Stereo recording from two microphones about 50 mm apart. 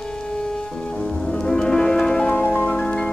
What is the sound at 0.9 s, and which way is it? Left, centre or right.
Music, centre.